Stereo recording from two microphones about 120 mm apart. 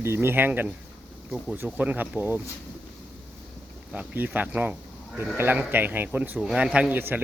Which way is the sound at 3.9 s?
10° right (ahead or behind).